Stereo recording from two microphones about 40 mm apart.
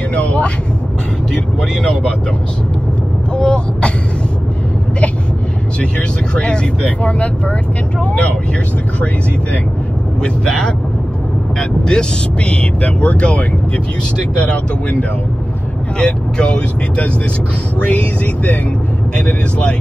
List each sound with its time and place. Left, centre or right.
0.1 s speech: left
1.3 s speech: centre
3.3 s throat clearing: left
5.8 s speech: left
11.8 s speech: centre; by 15.0 s left
16.0 s speech: left
19.1 s speech: left